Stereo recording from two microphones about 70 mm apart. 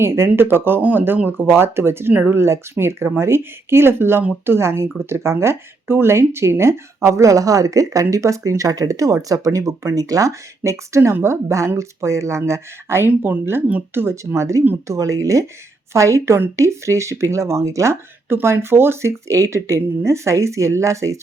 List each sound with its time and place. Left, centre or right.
0.0 s speech: right
13.1 s speech: right
13.4 s speech: right
18.3 s speech: right